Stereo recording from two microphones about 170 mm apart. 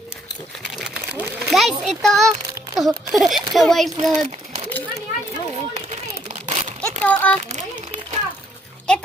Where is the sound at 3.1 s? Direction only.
Centre (ahead or behind).